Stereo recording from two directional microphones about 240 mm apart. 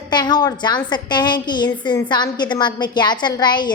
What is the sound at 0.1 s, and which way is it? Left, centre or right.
A woman's voice, centre.